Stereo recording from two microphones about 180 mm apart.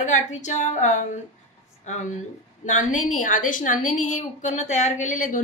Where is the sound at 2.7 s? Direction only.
45° left (ahead or behind).